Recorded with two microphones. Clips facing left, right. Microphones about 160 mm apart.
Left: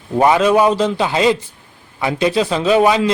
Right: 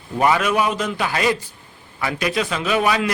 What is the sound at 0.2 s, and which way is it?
A man's voice, 25° left (ahead or behind).